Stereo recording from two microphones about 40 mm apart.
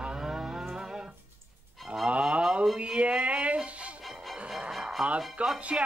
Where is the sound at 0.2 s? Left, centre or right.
Centre.